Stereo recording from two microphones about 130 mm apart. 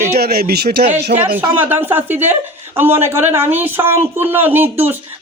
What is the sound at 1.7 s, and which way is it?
Speech, 15° right (ahead or behind).